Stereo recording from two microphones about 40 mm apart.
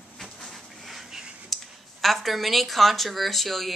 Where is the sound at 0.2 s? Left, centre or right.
Centre.